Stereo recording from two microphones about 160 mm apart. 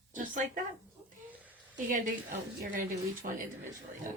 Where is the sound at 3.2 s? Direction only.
65° right (ahead or behind).